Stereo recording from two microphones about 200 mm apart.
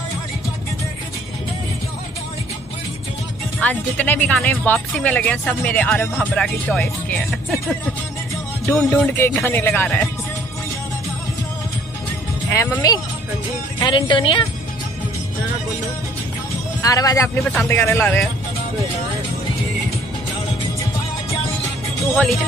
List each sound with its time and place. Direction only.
3.6 s speech: 5° left (ahead or behind)
8.6 s speech: 10° left (ahead or behind)
12.4 s speech: 15° left (ahead or behind)
16.8 s speech: 15° left (ahead or behind)
17.4 s speech: 5° left (ahead or behind)
22.1 s speech: 5° left (ahead or behind)